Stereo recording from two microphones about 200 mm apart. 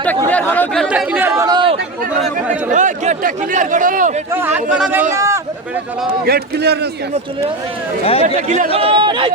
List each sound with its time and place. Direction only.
0.3 s chatter: 10° left (ahead or behind); by 1.7 s 20° right (ahead or behind)
2.7 s speech: 35° right (ahead or behind)
4.3 s speech: 10° right (ahead or behind)
6.2 s a man's voice: 50° right (ahead or behind)
8.0 s speech: 30° left (ahead or behind)
8.4 s speech: 35° right (ahead or behind)